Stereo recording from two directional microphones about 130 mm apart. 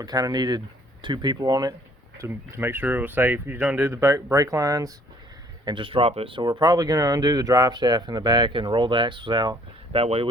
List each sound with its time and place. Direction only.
0.0 s speech: 30° right (ahead or behind)
2.1 s speech: 20° right (ahead or behind)
5.6 s speech: 40° right (ahead or behind)